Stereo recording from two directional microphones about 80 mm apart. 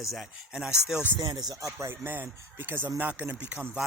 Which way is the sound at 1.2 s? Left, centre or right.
Right.